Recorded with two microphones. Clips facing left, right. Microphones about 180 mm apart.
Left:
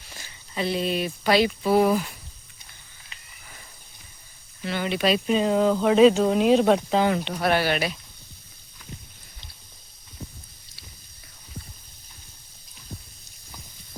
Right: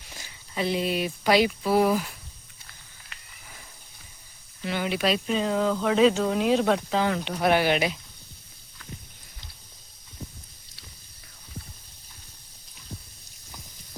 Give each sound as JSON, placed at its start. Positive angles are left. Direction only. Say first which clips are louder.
{"t": 0.2, "sound": "speech", "louder": "even", "side_deg": -10}
{"t": 4.6, "sound": "speech", "louder": "left 2 dB", "side_deg": -10}
{"t": 5.2, "sound": "speech", "louder": "left 4 dB", "side_deg": 15}
{"t": 7.3, "sound": "speech", "louder": "right 1 dB", "side_deg": -10}